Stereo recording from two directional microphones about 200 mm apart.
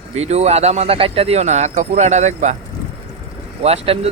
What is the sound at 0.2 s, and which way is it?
Speech, 35° right (ahead or behind).